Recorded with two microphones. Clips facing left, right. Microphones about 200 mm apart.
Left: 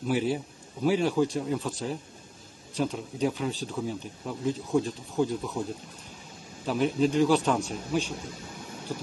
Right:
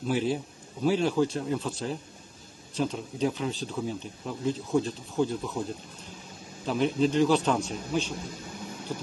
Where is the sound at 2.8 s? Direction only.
5° left (ahead or behind).